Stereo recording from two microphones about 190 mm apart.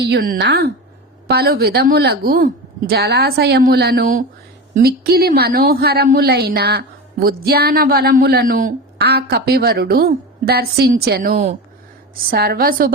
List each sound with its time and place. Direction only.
0.0 s a woman's voice: 55° right (ahead or behind)